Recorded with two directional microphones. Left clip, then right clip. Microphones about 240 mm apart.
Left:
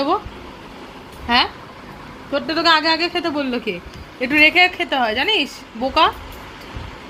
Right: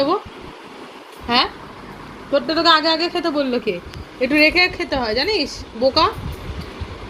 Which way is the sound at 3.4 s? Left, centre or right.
Centre.